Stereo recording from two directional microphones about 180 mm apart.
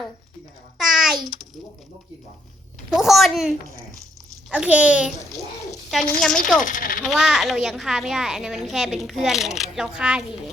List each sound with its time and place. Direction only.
0.8 s a sound: centre (ahead or behind)
2.9 s a child's voice: centre (ahead or behind)
4.5 s a child's voice: 5° right (ahead or behind)
6.1 s a child's voice: 5° left (ahead or behind)
6.6 s speech: 45° left (ahead or behind)
7.0 s a child's voice: centre (ahead or behind)